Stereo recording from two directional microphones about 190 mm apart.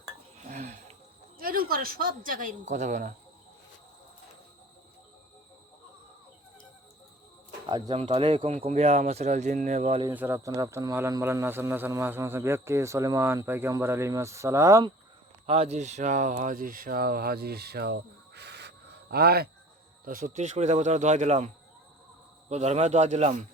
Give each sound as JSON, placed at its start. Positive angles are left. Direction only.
{"t": 0.4, "sound": "a sound", "side_deg": -40}
{"t": 1.4, "sound": "speech", "side_deg": -50}
{"t": 7.7, "sound": "speech", "side_deg": -25}
{"t": 10.1, "sound": "speech", "side_deg": -10}
{"t": 15.4, "sound": "speech", "side_deg": -30}
{"t": 20.1, "sound": "speech", "side_deg": -45}